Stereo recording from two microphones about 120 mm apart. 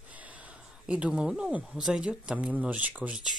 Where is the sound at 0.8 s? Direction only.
10° right (ahead or behind).